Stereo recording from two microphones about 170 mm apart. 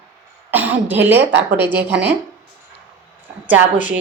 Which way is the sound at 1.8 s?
90° right.